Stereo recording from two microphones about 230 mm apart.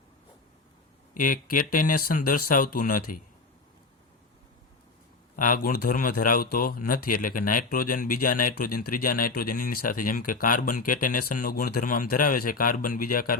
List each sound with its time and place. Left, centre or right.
1.1 s speech: left
5.4 s speech: left